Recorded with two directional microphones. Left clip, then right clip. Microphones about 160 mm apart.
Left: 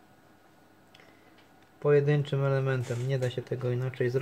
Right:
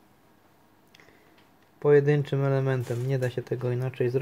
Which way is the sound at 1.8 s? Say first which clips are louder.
Right 4 dB; 45° right (ahead or behind).